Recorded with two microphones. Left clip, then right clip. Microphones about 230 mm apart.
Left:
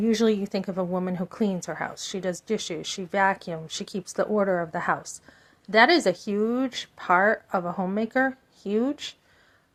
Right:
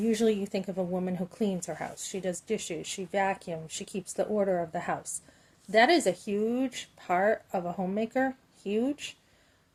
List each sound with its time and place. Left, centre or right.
0.0 s a woman's voice: centre